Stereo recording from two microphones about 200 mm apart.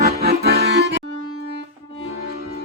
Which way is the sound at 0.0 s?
50° right (ahead or behind).